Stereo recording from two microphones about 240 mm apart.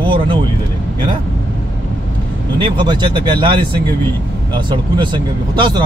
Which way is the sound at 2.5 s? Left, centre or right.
Centre.